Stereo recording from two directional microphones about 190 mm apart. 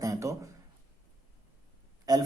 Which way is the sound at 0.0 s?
15° right (ahead or behind).